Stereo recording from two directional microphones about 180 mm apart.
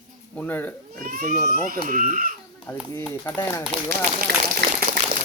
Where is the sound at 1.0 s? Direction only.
50° right (ahead or behind).